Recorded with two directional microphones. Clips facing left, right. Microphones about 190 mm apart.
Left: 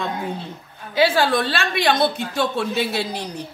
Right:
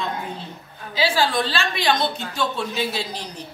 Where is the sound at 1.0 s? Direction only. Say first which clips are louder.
Left 3 dB; 55° left (ahead or behind).